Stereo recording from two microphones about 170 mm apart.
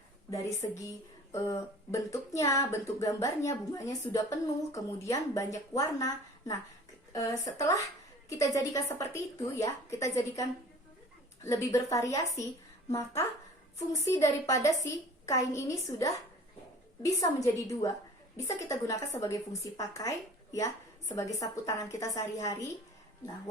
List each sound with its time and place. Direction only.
0.3 s speech: 20° left (ahead or behind)
11.4 s a woman's voice: 20° left (ahead or behind)